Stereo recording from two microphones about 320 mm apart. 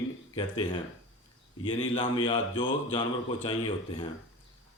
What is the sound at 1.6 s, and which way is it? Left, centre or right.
Speech, centre.